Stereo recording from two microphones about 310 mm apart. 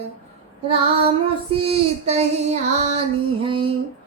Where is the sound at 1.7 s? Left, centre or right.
Right.